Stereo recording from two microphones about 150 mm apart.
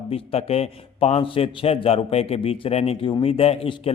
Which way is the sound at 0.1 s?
40° left (ahead or behind).